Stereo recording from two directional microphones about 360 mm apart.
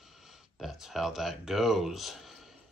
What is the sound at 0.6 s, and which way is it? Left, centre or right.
Speech, centre.